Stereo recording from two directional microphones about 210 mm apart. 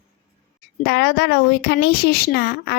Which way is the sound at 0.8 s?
50° left (ahead or behind).